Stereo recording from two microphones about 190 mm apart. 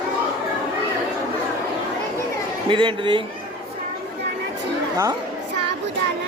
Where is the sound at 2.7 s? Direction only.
25° right (ahead or behind).